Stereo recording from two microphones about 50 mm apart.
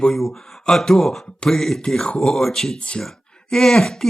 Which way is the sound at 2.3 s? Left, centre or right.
Centre.